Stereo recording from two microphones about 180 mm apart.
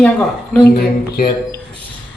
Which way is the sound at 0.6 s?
55° left (ahead or behind).